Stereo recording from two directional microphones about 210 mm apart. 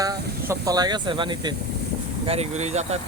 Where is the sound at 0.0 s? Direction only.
15° right (ahead or behind).